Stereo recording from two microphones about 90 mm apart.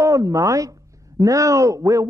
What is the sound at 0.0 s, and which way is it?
Speech, 40° right (ahead or behind).